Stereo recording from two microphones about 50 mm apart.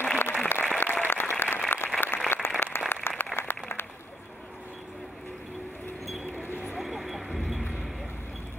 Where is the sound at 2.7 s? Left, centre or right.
Left.